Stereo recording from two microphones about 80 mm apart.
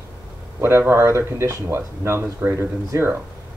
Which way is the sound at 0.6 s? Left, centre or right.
Right.